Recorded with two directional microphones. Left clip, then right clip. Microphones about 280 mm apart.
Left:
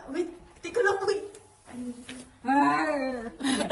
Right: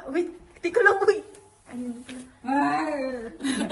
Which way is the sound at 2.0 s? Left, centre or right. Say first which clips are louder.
Even; centre.